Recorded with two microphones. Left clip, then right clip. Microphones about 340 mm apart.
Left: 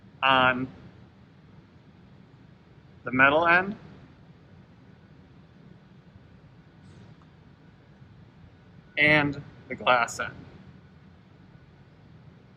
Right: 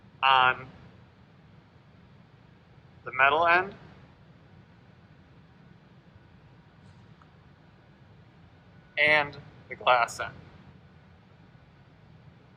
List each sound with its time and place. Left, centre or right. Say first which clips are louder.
0.2 s a man's voice: even; centre
3.1 s a man's voice: left 2 dB; centre
9.0 s a man's voice: left 2 dB; centre